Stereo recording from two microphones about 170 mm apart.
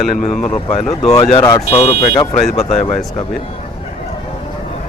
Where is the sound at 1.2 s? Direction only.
30° left (ahead or behind).